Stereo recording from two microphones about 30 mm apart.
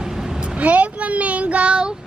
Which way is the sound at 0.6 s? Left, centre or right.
Right.